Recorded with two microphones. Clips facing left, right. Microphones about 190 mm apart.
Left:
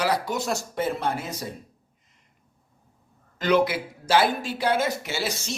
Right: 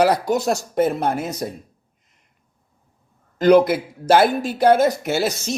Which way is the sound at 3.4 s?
45° right (ahead or behind).